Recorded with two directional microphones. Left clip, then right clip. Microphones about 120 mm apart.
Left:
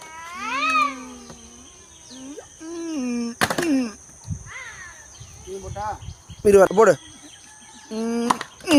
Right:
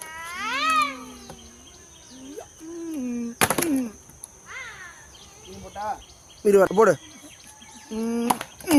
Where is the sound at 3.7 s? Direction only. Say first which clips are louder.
Left 4 dB; 90° left.